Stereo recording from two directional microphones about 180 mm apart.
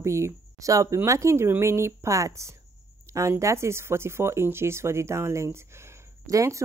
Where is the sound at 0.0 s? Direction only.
15° right (ahead or behind).